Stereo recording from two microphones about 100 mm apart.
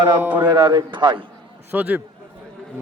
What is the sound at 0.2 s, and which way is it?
Speech, 15° right (ahead or behind).